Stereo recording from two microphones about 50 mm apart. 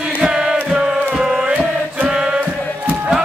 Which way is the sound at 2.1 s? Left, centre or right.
Centre.